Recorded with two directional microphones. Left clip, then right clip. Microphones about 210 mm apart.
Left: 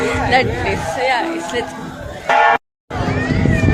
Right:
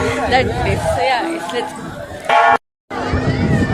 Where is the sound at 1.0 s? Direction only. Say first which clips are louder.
Even; 10° left (ahead or behind).